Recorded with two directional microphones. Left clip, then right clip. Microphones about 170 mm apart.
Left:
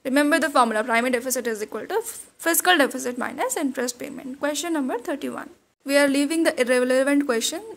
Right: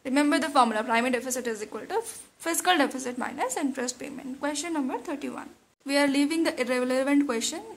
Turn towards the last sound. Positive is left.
turn(degrees=25)  # may be behind; listen again after turning